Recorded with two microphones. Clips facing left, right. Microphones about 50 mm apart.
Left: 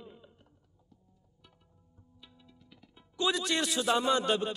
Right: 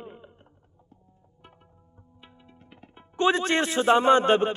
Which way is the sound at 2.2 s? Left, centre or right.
Right.